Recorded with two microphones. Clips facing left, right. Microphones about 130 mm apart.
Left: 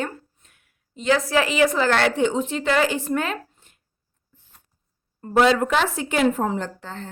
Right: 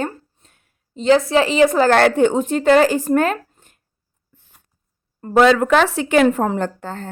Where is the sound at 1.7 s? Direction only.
45° right (ahead or behind).